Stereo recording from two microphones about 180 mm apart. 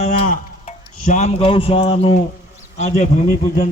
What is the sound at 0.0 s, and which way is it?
Tick-tock, 40° left (ahead or behind).